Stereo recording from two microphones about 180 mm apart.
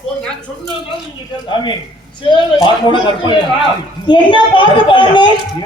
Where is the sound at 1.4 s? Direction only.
25° left (ahead or behind).